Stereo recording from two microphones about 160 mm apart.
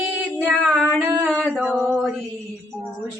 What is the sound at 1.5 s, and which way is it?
Music, 10° right (ahead or behind).